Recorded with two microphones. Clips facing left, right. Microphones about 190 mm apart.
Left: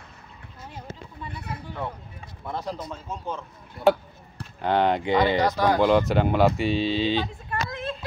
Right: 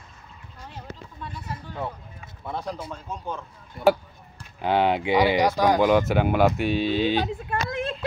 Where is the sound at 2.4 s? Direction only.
Centre (ahead or behind).